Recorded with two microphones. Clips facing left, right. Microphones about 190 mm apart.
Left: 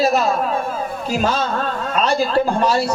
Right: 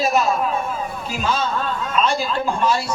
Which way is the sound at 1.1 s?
40° left (ahead or behind).